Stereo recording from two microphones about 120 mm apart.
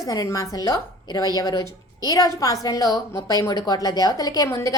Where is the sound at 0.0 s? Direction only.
30° left (ahead or behind).